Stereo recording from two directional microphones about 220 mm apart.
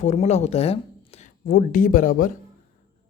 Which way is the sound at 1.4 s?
40° left (ahead or behind).